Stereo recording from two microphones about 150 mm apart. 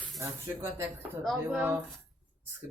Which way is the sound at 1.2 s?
Centre (ahead or behind).